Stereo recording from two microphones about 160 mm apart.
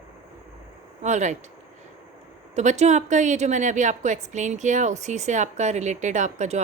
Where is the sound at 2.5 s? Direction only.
45° right (ahead or behind).